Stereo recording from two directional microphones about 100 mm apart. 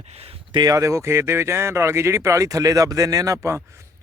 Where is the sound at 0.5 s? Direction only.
40° right (ahead or behind).